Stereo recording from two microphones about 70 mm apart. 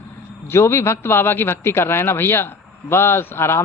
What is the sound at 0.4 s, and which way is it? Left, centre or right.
A man's voice, left.